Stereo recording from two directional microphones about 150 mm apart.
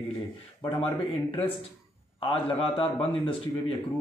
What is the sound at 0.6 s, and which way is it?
A man's voice, 35° left (ahead or behind).